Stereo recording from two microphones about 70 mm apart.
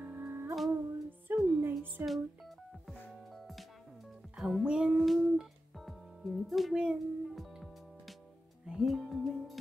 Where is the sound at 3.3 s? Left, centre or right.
Centre.